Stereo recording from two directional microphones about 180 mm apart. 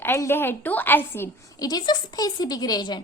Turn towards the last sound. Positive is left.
turn(degrees=25)  # may be behind; listen again after turning